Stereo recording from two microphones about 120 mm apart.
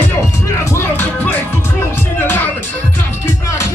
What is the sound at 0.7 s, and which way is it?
Music, 20° left (ahead or behind).